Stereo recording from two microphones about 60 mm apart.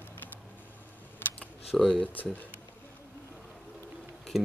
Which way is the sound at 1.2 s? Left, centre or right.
Left.